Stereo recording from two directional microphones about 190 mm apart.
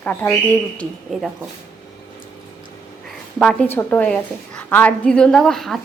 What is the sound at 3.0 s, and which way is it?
A woman's voice, 5° left (ahead or behind).